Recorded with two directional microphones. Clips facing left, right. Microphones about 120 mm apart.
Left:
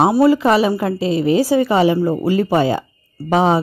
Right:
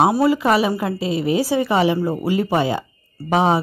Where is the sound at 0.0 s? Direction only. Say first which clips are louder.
Left 3 dB; 15° right (ahead or behind).